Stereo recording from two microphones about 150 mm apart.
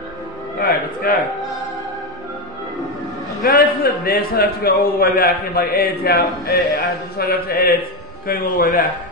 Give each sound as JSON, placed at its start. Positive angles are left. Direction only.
{"t": 0.6, "sound": "a sound", "side_deg": 90}
{"t": 3.4, "sound": "a man's voice", "side_deg": 90}
{"t": 7.2, "sound": "mantra", "side_deg": 90}
{"t": 8.3, "sound": "a man's voice", "side_deg": 70}